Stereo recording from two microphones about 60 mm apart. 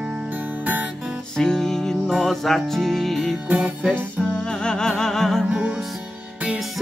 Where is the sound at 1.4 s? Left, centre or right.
Centre.